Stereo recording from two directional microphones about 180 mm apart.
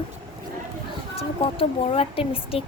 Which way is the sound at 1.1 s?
35° left (ahead or behind).